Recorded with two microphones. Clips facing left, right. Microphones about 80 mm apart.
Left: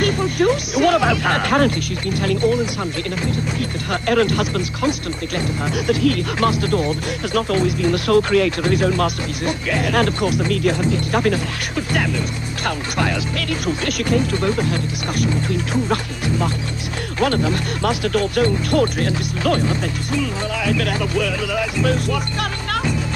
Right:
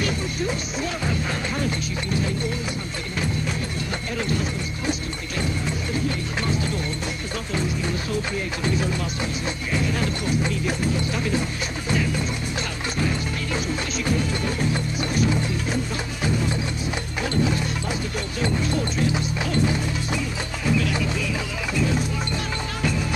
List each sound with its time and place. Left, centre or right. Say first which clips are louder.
0.0 s speech: left 9 dB; left
4.1 s speech: left 10 dB; left
5.9 s speech: left 13 dB; left
14.1 s speech: left 9 dB; left
17.2 s speech: left 6 dB; left
20.6 s speech: left 1 dB; left